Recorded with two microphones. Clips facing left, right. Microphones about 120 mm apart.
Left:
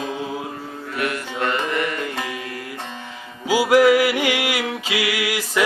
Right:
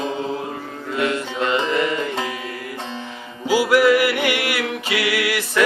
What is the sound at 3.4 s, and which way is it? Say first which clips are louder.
Music: left 1 dB; 15° left (ahead or behind).